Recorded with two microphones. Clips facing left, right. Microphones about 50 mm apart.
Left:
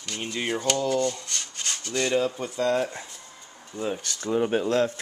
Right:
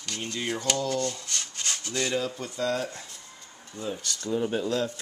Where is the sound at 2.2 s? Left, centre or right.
Centre.